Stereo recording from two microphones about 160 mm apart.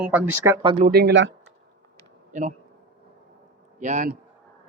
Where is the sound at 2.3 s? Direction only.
50° right (ahead or behind).